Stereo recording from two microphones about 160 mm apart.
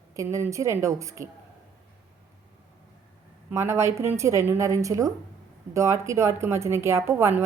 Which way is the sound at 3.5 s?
15° right (ahead or behind).